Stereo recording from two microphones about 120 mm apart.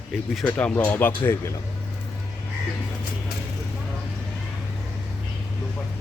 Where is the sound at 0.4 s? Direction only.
10° left (ahead or behind).